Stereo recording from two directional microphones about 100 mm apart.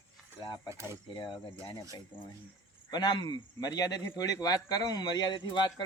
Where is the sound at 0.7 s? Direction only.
25° right (ahead or behind).